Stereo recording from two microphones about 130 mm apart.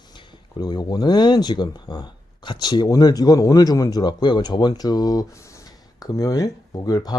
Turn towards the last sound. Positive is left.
turn(degrees=30)  # may be behind; listen again after turning